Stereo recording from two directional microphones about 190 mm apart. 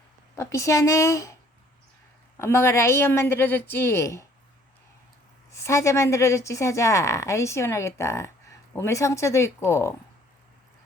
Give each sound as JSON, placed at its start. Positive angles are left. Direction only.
{"t": 0.3, "sound": "a woman's voice", "side_deg": 15}
{"t": 2.4, "sound": "a woman's voice", "side_deg": 15}
{"t": 5.5, "sound": "a woman's voice", "side_deg": 15}